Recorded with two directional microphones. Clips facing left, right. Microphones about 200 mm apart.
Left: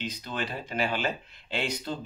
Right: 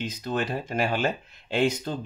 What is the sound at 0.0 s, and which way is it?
Speech, 45° right (ahead or behind).